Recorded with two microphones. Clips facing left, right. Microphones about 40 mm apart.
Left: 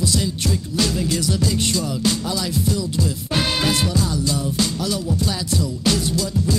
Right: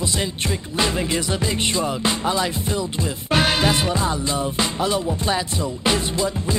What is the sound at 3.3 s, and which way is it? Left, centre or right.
Music, right.